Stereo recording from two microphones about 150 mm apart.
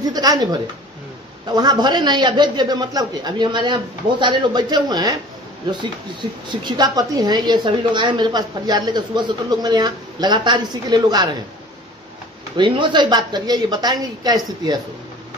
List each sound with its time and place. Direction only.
0.0 s a woman's voice: 25° right (ahead or behind)
6.5 s a woman's voice: 30° right (ahead or behind)
12.5 s a woman's voice: 35° right (ahead or behind)